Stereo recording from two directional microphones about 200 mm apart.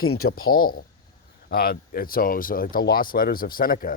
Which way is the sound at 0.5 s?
45° left (ahead or behind).